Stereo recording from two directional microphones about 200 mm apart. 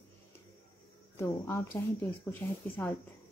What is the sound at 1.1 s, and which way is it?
Speech, 10° left (ahead or behind).